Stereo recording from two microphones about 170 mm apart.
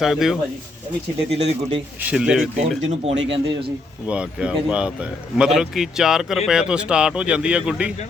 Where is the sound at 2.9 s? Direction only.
35° right (ahead or behind).